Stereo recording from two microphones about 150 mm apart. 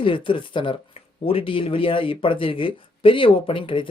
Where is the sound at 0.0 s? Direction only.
35° left (ahead or behind).